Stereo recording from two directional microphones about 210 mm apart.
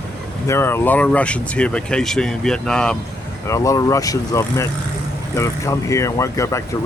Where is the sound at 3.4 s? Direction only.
15° left (ahead or behind).